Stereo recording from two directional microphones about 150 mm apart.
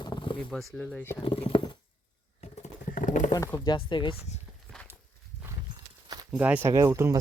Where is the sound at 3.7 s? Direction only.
35° left (ahead or behind).